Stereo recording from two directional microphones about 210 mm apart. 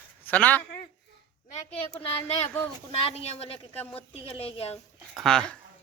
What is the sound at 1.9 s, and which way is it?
A woman's voice, 25° left (ahead or behind).